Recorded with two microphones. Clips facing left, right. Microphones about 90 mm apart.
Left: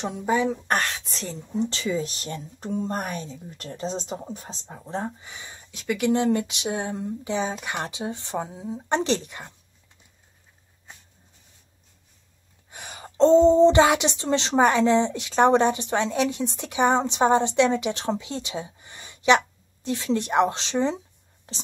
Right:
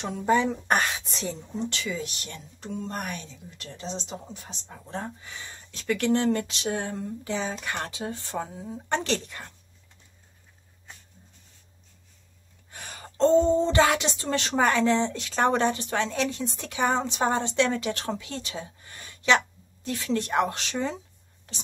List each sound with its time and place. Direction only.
0.1 s a woman's voice: 5° left (ahead or behind)
1.7 s speech: 35° left (ahead or behind); by 9.5 s 15° left (ahead or behind)
12.7 s gasp: 15° left (ahead or behind)
13.5 s speech: 25° left (ahead or behind)